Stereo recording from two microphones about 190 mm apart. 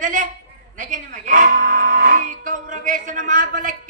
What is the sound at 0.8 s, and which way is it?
Music, 45° right (ahead or behind).